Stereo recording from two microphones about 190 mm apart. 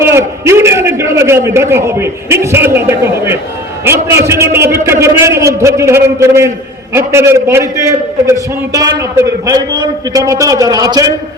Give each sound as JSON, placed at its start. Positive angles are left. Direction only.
{"t": 0.0, "sound": "a man's voice", "side_deg": -15}